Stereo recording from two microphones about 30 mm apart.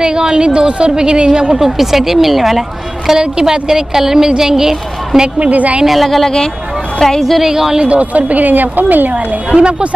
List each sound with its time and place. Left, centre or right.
0.0 s a woman's voice: right
1.6 s speech: centre
3.2 s a woman's voice: right
5.4 s a woman's voice: right
6.0 s a woman's voice: centre
7.4 s speech: centre
7.8 s a woman's voice: right
8.5 s a woman's voice: right
9.6 s speech: right